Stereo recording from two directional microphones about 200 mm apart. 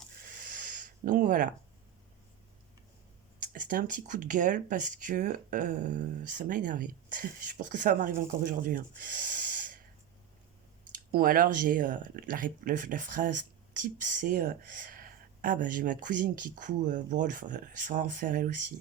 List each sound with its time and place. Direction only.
0.3 s a sound: 45° right (ahead or behind)
3.4 s speech: 40° right (ahead or behind)
10.9 s speech: 45° right (ahead or behind)